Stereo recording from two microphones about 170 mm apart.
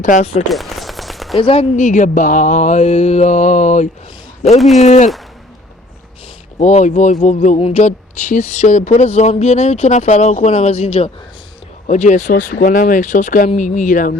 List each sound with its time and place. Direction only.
0.0 s mantra: 45° left (ahead or behind)
0.5 s machine gun: centre (ahead or behind)
1.4 s speech: 30° left (ahead or behind)
1.7 s mantra: 45° left (ahead or behind)
4.4 s speech: 40° left (ahead or behind)
4.8 s mantra: 45° left (ahead or behind)
6.6 s speech: 40° left (ahead or behind)
11.9 s mantra: 45° left (ahead or behind)